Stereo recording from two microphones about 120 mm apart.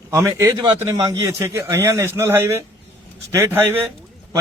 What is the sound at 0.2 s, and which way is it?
Speech, 20° right (ahead or behind).